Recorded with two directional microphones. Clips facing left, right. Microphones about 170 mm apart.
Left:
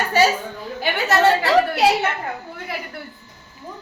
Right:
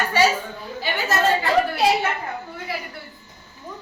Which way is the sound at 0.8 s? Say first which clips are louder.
Left 4 dB; 70° left (ahead or behind).